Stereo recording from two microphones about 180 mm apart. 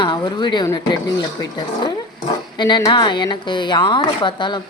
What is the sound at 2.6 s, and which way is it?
Speech, 25° left (ahead or behind).